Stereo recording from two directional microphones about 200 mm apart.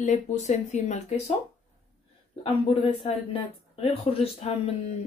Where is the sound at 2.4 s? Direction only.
25° left (ahead or behind).